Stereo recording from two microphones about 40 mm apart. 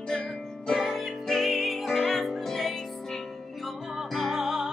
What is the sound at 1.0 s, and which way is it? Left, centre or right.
Music, centre.